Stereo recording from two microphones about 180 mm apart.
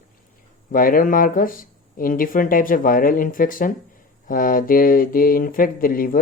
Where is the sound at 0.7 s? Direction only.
50° left (ahead or behind).